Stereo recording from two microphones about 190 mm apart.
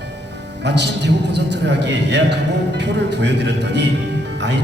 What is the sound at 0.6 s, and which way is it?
A man's voice, 65° right (ahead or behind).